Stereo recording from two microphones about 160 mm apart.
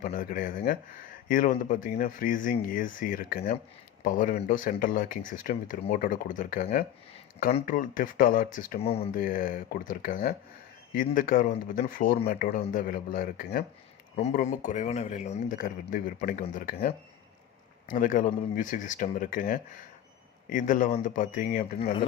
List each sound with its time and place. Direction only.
0.0 s speech: 65° left (ahead or behind)
8.8 s speech: 40° left (ahead or behind)
9.1 s speech: 60° left (ahead or behind)
14.2 s speech: 45° left (ahead or behind)